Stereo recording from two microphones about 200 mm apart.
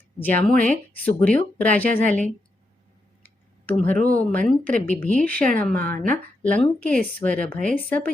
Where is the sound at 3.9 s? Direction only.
45° right (ahead or behind).